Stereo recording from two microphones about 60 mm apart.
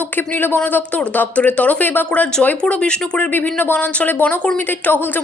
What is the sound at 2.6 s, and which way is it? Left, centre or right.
Speech, centre.